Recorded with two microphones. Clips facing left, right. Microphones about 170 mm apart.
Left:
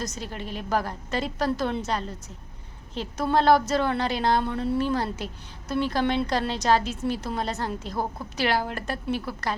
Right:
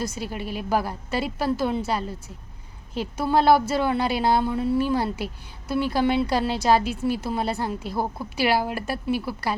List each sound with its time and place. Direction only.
0.0 s speech: 10° right (ahead or behind)